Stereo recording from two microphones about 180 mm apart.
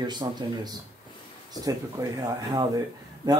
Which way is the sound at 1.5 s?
20° right (ahead or behind).